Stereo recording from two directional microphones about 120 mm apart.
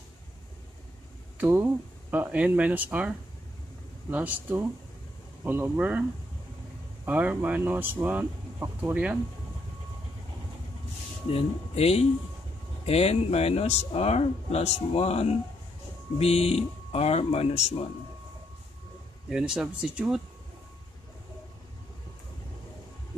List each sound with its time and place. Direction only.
1.4 s speech: 15° right (ahead or behind)
7.1 s speech: 15° right (ahead or behind)
11.2 s speech: 55° left (ahead or behind)
19.2 s speech: 5° right (ahead or behind)